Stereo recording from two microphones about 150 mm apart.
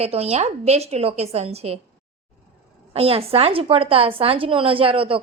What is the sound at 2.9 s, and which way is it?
A woman's voice, 40° right (ahead or behind).